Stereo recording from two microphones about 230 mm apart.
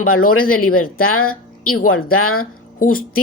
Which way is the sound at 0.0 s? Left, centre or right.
Left.